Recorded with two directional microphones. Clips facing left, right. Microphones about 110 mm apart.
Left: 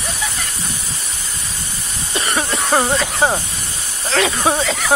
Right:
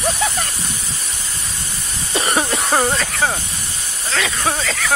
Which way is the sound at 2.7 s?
5° left (ahead or behind).